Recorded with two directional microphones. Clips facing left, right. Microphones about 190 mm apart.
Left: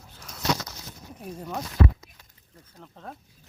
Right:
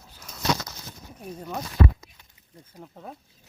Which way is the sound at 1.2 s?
5° right (ahead or behind).